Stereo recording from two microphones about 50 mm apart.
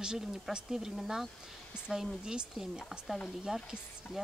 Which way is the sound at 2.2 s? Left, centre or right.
Centre.